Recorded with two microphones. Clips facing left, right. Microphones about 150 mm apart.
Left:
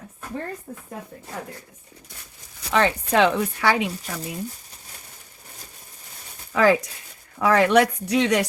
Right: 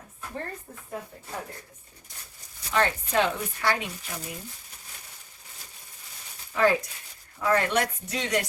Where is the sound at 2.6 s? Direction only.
90° left; by 3.8 s 75° left (ahead or behind).